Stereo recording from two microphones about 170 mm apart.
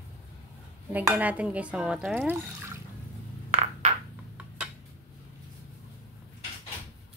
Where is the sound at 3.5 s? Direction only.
40° right (ahead or behind).